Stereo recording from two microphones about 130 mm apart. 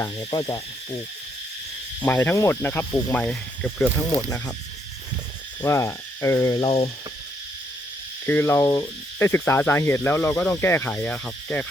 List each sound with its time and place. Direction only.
0.3 s hoot: 30° left (ahead or behind)
2.0 s speech: 15° left (ahead or behind)
5.6 s frog: 20° left (ahead or behind)
6.7 s cricket: 50° left (ahead or behind)
8.3 s speech: 20° left (ahead or behind)